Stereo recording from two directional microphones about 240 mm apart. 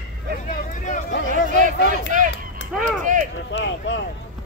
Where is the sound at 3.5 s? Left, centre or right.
Left.